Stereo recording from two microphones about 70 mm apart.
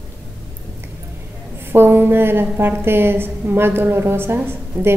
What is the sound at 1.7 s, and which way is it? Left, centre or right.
A woman's voice, right.